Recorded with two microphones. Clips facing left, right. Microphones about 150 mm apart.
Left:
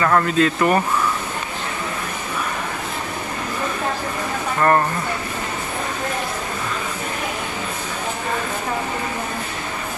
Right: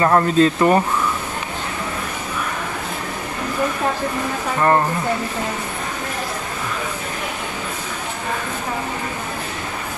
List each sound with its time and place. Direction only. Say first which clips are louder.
0.0 s speech: right 3 dB; 25° right (ahead or behind)
4.6 s speech: even; 15° right (ahead or behind)